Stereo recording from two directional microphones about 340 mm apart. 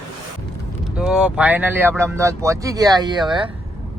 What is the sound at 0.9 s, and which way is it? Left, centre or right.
Speech, centre.